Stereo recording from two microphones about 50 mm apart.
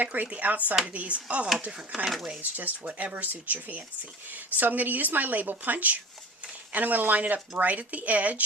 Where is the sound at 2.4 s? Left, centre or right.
Right.